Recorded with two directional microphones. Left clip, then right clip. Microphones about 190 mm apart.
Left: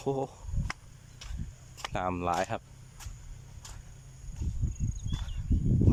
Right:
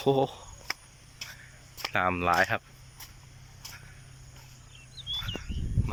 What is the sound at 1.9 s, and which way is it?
Speech, 15° left (ahead or behind).